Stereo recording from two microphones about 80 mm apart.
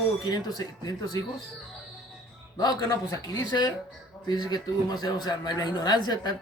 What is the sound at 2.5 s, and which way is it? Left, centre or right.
Speech, left.